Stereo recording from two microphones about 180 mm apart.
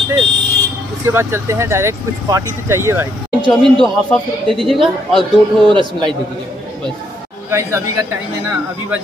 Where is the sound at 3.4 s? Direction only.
5° left (ahead or behind).